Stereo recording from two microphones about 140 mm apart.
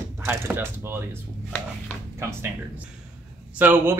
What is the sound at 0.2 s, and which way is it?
Speech, 15° right (ahead or behind).